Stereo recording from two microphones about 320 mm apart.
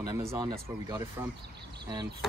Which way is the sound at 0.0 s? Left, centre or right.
Centre.